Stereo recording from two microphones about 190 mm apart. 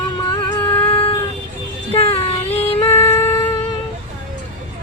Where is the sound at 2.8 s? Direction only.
10° left (ahead or behind).